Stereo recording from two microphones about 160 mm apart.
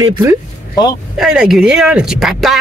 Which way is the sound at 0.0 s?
15° right (ahead or behind).